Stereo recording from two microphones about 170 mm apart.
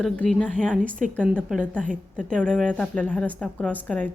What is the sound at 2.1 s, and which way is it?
A woman's voice, 5° left (ahead or behind).